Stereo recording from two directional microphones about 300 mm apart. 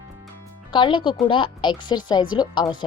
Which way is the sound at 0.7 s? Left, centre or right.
Centre.